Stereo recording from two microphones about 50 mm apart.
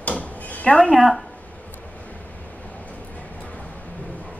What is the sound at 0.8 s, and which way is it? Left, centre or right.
Speech, centre.